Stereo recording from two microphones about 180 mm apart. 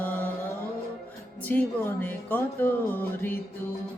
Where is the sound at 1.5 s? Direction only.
10° left (ahead or behind).